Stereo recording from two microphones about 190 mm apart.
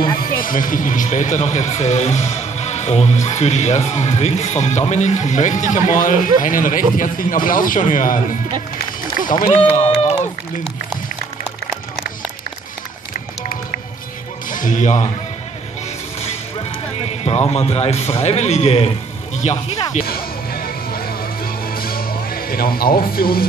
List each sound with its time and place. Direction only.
0.3 s speech: 45° left (ahead or behind)
9.8 s speech: 35° left (ahead or behind)
14.5 s speech: 45° left (ahead or behind)
17.2 s speech: 35° left (ahead or behind)
20.1 s music: 50° left (ahead or behind)